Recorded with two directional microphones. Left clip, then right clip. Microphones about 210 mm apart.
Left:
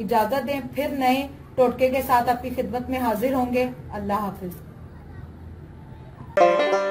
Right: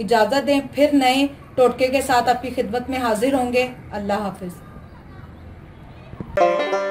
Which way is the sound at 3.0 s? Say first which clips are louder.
Right 4 dB; 45° right (ahead or behind).